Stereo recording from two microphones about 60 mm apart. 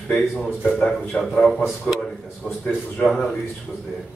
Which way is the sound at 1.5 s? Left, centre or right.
Centre.